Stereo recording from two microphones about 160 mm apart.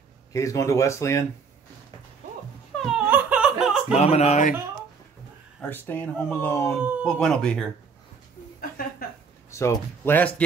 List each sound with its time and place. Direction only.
0.3 s speech: 20° left (ahead or behind)
2.8 s laughter: 5° right (ahead or behind)
3.9 s speech: 40° left (ahead or behind)
5.6 s speech: 10° left (ahead or behind)
6.8 s speech: 10° right (ahead or behind)
7.1 s speech: 5° left (ahead or behind)
9.0 s a sound: 70° left (ahead or behind)
9.5 s speech: 20° left (ahead or behind)